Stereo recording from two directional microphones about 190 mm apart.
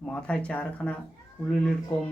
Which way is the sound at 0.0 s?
5° left (ahead or behind).